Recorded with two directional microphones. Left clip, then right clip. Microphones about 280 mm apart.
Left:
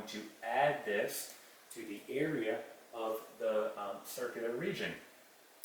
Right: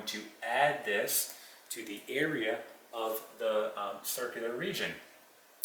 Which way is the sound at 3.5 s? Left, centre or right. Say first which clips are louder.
Right 3 dB; centre.